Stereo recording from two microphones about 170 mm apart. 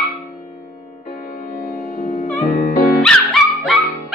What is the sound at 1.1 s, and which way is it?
Music, 60° left (ahead or behind).